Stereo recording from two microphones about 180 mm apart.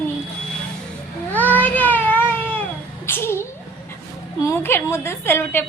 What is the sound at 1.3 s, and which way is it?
Cat, 10° left (ahead or behind).